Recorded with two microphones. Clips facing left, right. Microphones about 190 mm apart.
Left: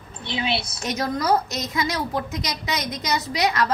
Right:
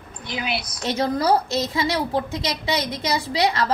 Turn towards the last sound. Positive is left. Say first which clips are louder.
# right 1 dB
turn(degrees=-30)  # may be behind; listen again after turning